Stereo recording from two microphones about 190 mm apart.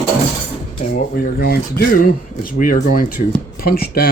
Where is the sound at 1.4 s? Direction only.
55° left (ahead or behind).